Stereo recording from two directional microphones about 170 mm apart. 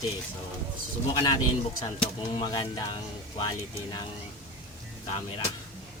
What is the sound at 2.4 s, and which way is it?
Speech, 25° left (ahead or behind).